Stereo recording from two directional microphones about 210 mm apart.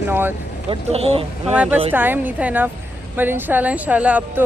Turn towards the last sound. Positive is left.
turn(degrees=-5)  # may be behind; listen again after turning